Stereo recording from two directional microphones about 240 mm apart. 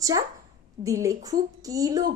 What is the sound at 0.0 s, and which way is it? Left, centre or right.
A woman's voice, centre.